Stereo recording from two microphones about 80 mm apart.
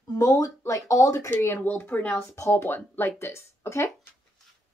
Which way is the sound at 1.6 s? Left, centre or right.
Left.